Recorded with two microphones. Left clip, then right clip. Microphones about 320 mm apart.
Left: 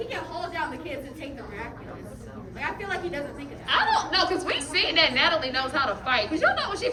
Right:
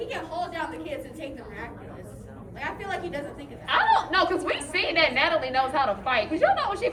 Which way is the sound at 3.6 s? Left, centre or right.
Centre.